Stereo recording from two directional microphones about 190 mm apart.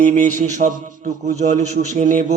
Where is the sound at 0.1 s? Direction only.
40° right (ahead or behind).